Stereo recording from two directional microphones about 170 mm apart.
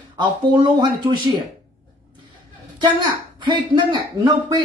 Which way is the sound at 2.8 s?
30° right (ahead or behind).